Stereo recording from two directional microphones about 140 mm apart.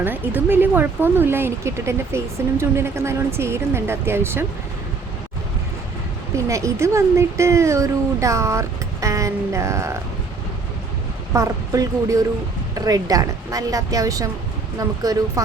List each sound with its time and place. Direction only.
0.0 s speech: 15° right (ahead or behind)
6.3 s speech: 20° right (ahead or behind)
11.3 s speech: 25° right (ahead or behind)